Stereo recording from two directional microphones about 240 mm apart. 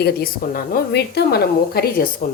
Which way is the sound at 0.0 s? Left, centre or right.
Left.